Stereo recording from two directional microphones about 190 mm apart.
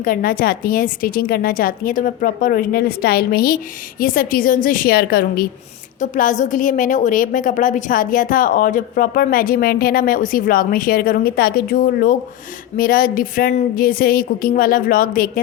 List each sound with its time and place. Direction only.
0.0 s a woman's voice: 50° left (ahead or behind)
6.0 s a woman's voice: 45° left (ahead or behind)